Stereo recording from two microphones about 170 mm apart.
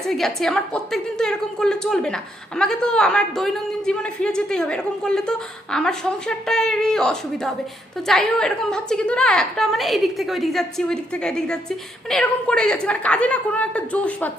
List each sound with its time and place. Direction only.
0.0 s a man's voice: centre (ahead or behind)